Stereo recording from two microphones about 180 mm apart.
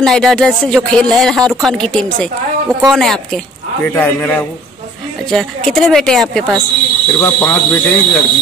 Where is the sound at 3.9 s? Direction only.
10° left (ahead or behind).